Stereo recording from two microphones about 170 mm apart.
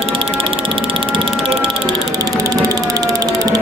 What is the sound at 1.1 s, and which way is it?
Music, 30° right (ahead or behind).